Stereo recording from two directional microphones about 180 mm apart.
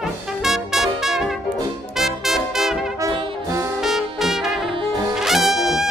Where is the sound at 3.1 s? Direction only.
30° right (ahead or behind).